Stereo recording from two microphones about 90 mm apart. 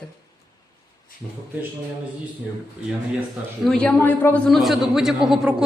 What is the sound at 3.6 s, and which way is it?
Speech, 10° left (ahead or behind).